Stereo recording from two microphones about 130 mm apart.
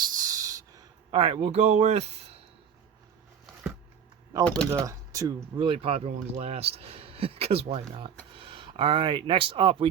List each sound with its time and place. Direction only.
0.0 s a sound: 25° right (ahead or behind)
1.1 s speech: 45° right (ahead or behind)
1.5 s speech: 60° right (ahead or behind)
4.4 s speech: 5° left (ahead or behind)
4.7 s speech: 20° right (ahead or behind)
5.5 s speech: 45° right (ahead or behind)